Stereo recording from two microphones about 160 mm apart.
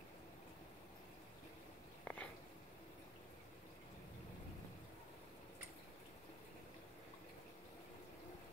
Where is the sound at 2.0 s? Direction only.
10° left (ahead or behind).